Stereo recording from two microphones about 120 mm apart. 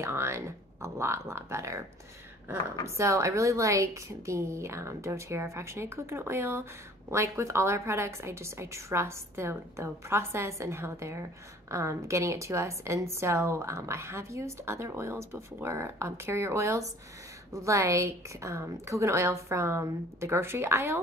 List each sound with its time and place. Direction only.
0.0 s a woman's voice: 20° right (ahead or behind)
3.0 s a woman's voice: 25° right (ahead or behind)